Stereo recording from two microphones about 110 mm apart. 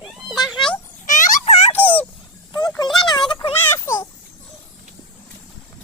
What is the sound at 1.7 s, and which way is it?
Dog, 15° left (ahead or behind).